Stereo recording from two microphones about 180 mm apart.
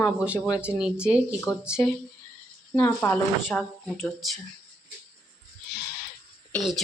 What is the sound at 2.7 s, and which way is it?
Speech, 10° left (ahead or behind).